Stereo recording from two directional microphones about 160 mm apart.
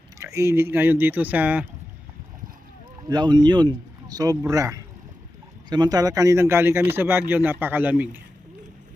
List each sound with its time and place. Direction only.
0.2 s speech: 20° right (ahead or behind)
3.1 s speech: 25° right (ahead or behind); by 8.2 s 10° right (ahead or behind)